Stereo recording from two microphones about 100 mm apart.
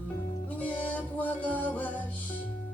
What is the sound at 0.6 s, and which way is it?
Music, 15° left (ahead or behind).